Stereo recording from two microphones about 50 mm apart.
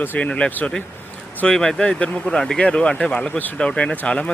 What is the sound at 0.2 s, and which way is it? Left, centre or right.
Speech, left.